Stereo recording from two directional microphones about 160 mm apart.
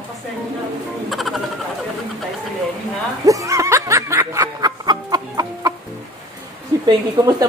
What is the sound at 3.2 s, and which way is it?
Snicker, 20° right (ahead or behind).